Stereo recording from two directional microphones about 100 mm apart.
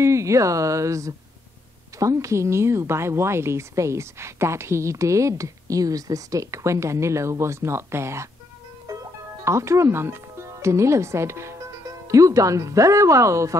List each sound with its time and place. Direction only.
0.0 s a woman's voice: 30° right (ahead or behind)